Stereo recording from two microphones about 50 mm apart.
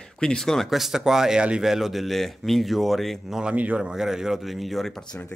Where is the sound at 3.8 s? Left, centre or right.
Centre.